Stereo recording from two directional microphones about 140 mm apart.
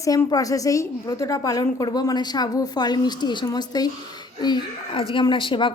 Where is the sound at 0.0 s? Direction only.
25° left (ahead or behind).